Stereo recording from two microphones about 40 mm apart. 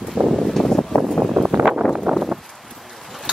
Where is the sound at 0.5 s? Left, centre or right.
Centre.